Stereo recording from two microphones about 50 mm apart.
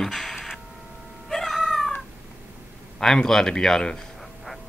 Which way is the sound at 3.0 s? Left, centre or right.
Centre.